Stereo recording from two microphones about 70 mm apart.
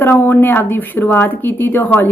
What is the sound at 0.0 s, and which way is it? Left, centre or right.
Speech, left.